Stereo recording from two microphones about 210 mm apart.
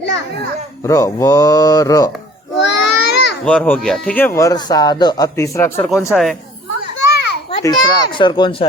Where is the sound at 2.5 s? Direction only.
55° left (ahead or behind).